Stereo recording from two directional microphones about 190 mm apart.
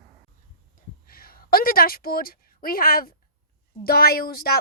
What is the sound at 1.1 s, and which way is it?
A woman's voice, 50° left (ahead or behind).